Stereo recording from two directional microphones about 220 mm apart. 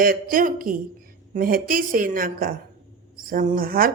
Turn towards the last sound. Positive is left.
turn(degrees=-40)  # may be behind; listen again after turning